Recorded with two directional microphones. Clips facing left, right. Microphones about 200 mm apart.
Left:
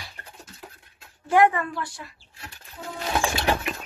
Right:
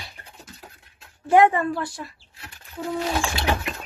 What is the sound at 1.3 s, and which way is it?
Speech, 25° right (ahead or behind).